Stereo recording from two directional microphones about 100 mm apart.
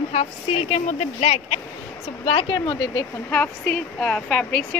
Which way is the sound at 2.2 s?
65° left (ahead or behind).